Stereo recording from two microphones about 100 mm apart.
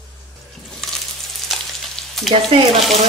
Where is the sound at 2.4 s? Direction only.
70° right (ahead or behind).